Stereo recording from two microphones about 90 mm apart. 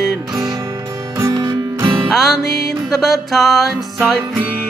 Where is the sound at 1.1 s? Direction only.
40° right (ahead or behind).